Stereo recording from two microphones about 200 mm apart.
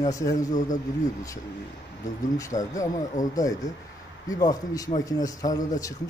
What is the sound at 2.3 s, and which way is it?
A man's voice, 15° left (ahead or behind).